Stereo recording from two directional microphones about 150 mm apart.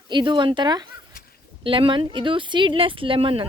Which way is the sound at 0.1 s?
30° right (ahead or behind).